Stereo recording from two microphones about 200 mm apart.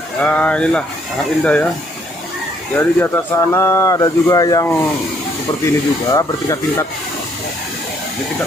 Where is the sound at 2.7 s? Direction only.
10° left (ahead or behind).